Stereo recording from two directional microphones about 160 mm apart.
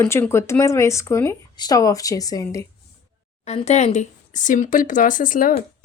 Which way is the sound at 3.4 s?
40° left (ahead or behind).